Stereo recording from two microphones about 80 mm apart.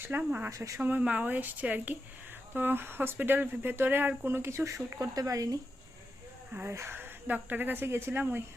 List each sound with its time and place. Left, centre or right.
0.2 s speech: centre
0.5 s speech: right
0.8 s speech: right
6.7 s speech: right